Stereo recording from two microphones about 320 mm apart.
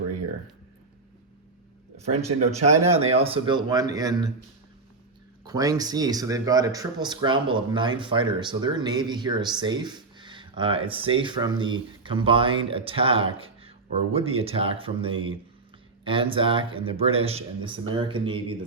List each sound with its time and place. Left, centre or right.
2.0 s speech: right
5.5 s speech: centre